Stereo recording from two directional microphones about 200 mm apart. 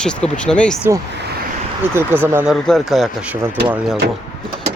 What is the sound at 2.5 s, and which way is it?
Speech, 5° left (ahead or behind).